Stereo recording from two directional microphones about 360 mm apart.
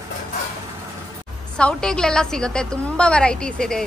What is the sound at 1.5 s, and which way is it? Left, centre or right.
A woman's voice, centre.